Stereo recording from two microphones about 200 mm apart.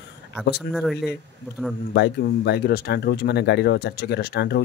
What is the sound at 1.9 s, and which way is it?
Speech, 55° left (ahead or behind).